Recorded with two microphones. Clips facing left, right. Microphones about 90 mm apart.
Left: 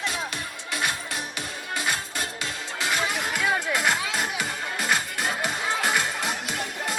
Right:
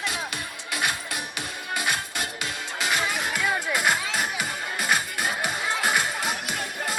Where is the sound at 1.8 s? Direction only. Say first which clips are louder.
Even; 15° right (ahead or behind).